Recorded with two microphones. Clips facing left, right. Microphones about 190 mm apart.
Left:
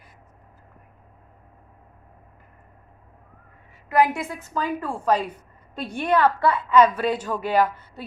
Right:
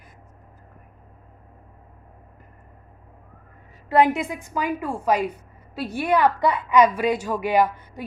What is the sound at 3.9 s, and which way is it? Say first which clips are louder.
A woman's voice: right 2 dB; 25° right (ahead or behind).